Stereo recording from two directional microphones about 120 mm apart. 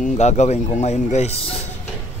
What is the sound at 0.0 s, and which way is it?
A man's voice, 75° left (ahead or behind).